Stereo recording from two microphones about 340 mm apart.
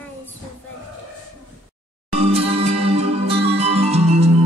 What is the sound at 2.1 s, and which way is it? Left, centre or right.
Music, centre.